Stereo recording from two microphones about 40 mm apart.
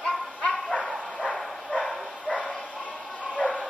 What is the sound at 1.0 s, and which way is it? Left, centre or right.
Dog, centre.